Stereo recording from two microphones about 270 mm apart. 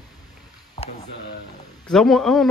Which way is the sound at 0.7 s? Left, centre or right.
Left.